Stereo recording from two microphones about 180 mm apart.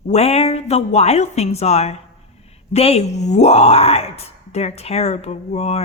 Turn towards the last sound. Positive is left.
turn(degrees=35)  # may be behind; listen again after turning